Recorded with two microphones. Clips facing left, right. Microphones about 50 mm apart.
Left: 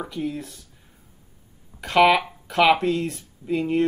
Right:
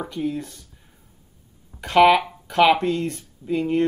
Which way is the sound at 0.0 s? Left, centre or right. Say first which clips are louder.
Right 2 dB; centre.